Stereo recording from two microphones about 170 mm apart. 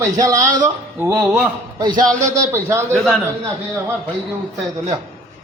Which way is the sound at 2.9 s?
5° left (ahead or behind).